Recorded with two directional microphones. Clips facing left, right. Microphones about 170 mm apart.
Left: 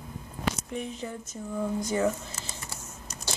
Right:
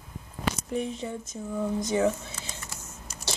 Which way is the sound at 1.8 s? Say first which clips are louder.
Right 2 dB; 20° right (ahead or behind).